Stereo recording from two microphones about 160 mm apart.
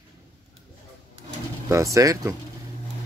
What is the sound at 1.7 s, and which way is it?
Speech, 20° right (ahead or behind).